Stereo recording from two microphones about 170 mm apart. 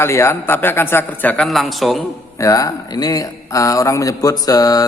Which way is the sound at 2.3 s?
20° left (ahead or behind).